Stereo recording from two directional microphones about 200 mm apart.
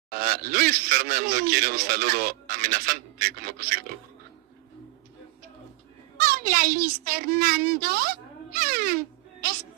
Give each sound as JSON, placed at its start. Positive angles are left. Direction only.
{"t": 0.1, "sound": "a man's voice", "side_deg": -45}
{"t": 6.1, "sound": "a woman's voice", "side_deg": -45}